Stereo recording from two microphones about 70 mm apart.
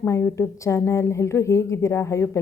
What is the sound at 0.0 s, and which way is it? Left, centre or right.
A woman's voice, left.